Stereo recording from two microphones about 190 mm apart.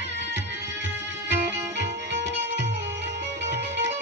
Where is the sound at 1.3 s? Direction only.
65° right (ahead or behind).